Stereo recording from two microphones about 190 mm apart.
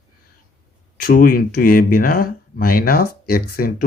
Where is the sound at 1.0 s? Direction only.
50° left (ahead or behind).